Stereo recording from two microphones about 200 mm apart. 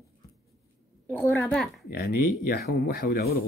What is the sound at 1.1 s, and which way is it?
Speech, 10° left (ahead or behind).